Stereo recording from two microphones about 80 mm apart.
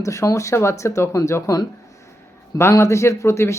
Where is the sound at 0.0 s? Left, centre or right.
Left.